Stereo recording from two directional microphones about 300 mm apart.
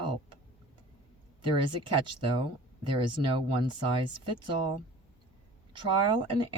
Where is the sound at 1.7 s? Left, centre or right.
Centre.